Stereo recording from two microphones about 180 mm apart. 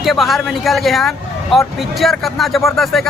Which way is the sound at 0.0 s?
Centre (ahead or behind).